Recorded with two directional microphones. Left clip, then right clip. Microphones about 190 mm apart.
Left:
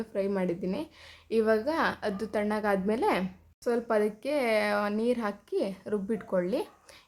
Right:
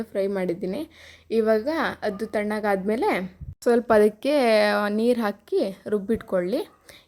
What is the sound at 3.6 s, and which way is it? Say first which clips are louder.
Speech: right 9 dB; 35° right (ahead or behind).